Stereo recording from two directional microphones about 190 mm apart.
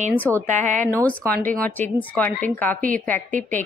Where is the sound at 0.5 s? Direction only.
40° right (ahead or behind).